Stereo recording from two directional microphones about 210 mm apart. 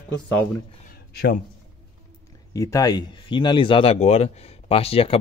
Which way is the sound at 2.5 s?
15° left (ahead or behind).